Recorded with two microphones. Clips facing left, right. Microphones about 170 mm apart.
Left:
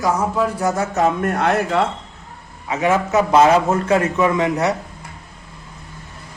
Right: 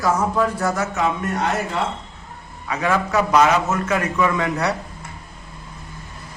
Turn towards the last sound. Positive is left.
turn(degrees=20)  # may be behind; listen again after turning